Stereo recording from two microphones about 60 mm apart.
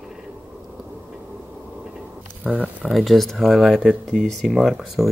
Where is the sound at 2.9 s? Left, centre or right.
Centre.